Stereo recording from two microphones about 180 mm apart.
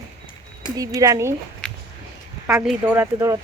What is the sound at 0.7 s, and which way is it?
Speech, 20° right (ahead or behind).